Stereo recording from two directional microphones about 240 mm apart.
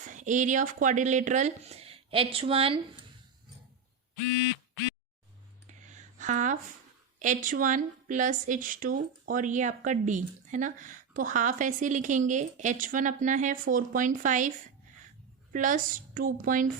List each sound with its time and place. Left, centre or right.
0.0 s a woman's voice: right
5.6 s a sound: right
7.2 s a woman's voice: right
15.5 s a woman's voice: right